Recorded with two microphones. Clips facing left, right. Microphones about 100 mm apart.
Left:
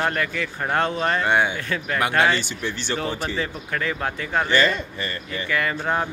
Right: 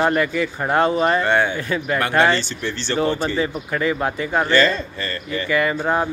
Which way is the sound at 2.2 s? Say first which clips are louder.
Right 3 dB; 10° left (ahead or behind).